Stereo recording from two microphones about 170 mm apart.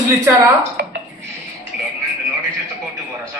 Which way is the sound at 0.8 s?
65° right (ahead or behind).